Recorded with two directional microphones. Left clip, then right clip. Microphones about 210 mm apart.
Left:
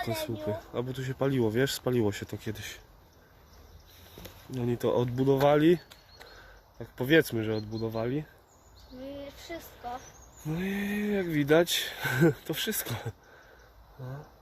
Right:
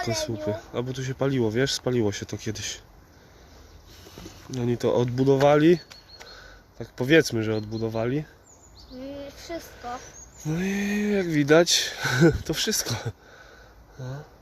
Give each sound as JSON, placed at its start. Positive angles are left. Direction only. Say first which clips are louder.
{"t": 0.2, "sound": "speech", "louder": "right 5 dB", "side_deg": -10}
{"t": 4.5, "sound": "speech", "louder": "right 4 dB", "side_deg": -15}
{"t": 9.0, "sound": "a sound", "louder": "right 4 dB", "side_deg": -50}
{"t": 9.9, "sound": "speech", "louder": "right 4 dB", "side_deg": -20}